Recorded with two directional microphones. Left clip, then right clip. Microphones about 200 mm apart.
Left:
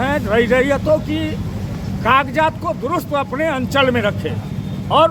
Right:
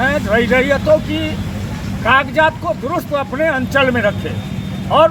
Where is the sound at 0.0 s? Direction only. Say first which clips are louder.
Right 2 dB; 30° left (ahead or behind).